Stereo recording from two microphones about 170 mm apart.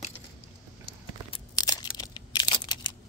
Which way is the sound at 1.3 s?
25° left (ahead or behind).